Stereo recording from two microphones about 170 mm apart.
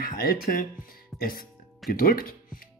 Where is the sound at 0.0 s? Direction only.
60° left (ahead or behind).